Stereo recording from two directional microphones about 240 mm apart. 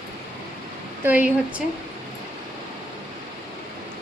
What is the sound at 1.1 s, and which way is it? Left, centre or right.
Speech, centre.